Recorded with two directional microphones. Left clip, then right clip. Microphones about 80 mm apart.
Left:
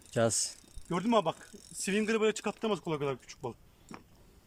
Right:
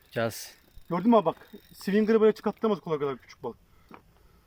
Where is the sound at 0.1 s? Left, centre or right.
Left.